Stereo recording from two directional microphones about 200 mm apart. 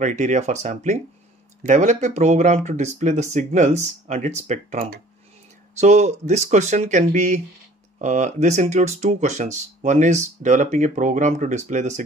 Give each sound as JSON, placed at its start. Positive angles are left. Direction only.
{"t": 0.0, "sound": "speech", "side_deg": -35}